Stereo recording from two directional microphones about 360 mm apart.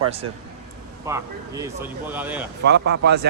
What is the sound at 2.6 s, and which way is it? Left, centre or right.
Speech, right.